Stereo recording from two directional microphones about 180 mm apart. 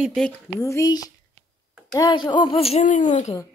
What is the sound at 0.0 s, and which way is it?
Music, centre (ahead or behind).